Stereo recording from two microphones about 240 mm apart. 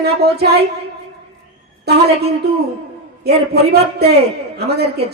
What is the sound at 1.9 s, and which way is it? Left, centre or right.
Speech, right.